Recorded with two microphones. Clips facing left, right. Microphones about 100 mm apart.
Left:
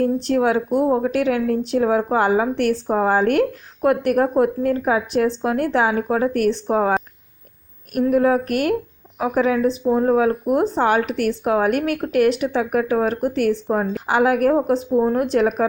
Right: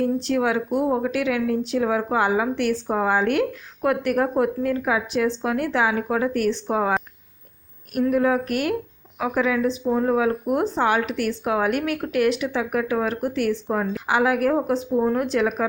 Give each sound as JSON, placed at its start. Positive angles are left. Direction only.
{"t": 0.0, "sound": "a woman's voice", "side_deg": 50}
{"t": 0.9, "sound": "a woman's voice", "side_deg": 30}
{"t": 1.1, "sound": "a woman's voice", "side_deg": 40}
{"t": 8.1, "sound": "a woman's voice", "side_deg": 40}
{"t": 9.1, "sound": "a woman's voice", "side_deg": 35}